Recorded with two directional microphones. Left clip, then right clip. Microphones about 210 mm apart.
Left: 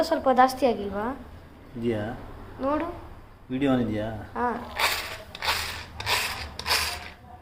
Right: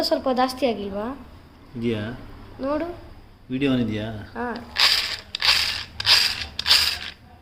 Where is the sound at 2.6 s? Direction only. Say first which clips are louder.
Right 1 dB; 15° right (ahead or behind).